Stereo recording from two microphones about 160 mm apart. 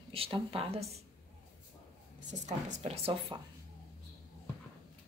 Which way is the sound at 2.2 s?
50° right (ahead or behind).